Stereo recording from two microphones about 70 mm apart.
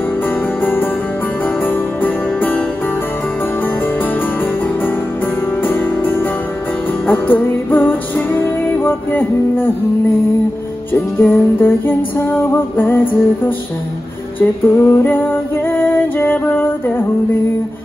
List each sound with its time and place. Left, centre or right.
0.6 s music: left
5.6 s music: left
10.9 s music: left
14.4 s female singing: left